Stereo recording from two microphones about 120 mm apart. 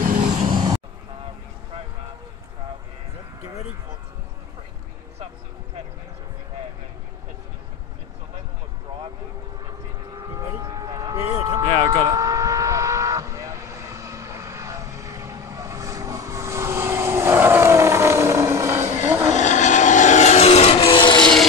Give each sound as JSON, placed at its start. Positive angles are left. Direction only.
{"t": 0.0, "sound": "vehicle", "side_deg": -90}
{"t": 0.5, "sound": "vehicle", "side_deg": -40}
{"t": 10.6, "sound": "vehicle", "side_deg": -30}
{"t": 19.3, "sound": "vehicle", "side_deg": 90}
{"t": 21.2, "sound": "vehicle", "side_deg": 5}